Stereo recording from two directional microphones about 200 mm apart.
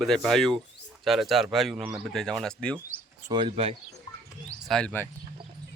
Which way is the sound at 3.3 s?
25° right (ahead or behind).